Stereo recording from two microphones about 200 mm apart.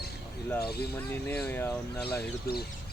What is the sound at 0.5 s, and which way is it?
Speech, 50° left (ahead or behind).